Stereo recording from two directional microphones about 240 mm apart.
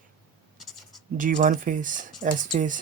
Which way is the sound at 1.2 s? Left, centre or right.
Right.